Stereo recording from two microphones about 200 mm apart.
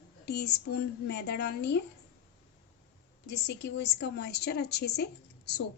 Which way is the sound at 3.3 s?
55° left (ahead or behind).